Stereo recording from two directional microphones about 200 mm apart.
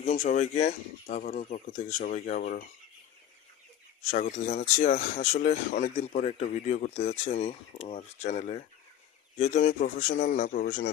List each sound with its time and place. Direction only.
0.0 s speech: 30° left (ahead or behind)
2.4 s dishes: 45° left (ahead or behind)
4.1 s speech: 40° left (ahead or behind)